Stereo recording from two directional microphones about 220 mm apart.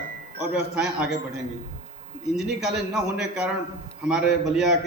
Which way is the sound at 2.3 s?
Centre (ahead or behind).